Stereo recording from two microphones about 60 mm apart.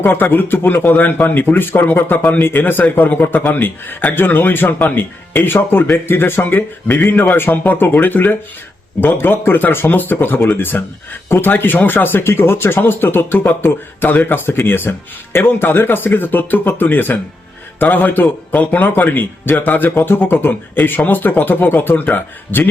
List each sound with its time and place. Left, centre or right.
0.0 s a man's voice: left